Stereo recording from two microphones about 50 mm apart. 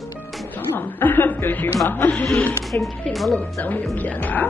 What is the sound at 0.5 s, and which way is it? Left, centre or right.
Chuckle, left.